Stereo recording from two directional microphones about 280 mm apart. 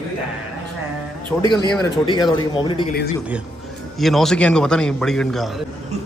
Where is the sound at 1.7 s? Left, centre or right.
Centre.